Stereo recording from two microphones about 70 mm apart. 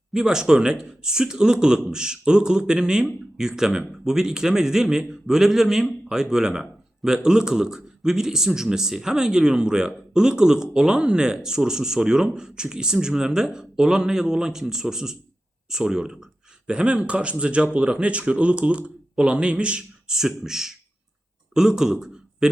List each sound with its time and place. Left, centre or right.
0.1 s a man's voice: centre